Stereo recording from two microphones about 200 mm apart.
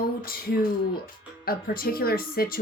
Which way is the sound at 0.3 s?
45° left (ahead or behind).